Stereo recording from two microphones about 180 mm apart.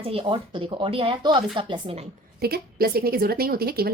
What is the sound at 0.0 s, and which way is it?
Speech, 30° right (ahead or behind).